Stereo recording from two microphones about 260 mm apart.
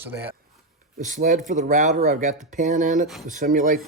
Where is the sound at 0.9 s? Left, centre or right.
Right.